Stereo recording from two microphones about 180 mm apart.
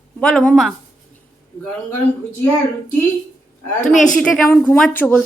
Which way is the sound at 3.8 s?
45° left (ahead or behind).